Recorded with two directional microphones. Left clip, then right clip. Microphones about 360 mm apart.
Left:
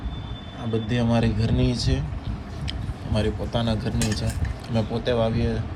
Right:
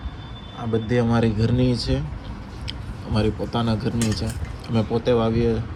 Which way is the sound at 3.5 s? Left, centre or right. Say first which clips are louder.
Right 2 dB; centre.